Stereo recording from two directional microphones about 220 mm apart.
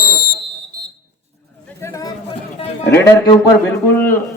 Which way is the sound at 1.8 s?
15° left (ahead or behind).